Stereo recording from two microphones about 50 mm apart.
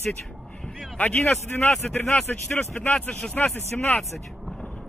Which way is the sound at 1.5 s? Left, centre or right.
Left.